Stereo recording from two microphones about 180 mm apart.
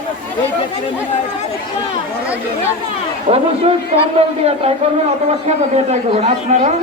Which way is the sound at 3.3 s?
35° right (ahead or behind).